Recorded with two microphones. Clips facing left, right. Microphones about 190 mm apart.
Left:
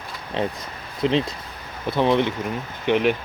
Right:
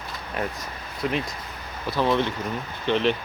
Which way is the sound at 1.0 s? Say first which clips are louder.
Left 6 dB; 25° left (ahead or behind).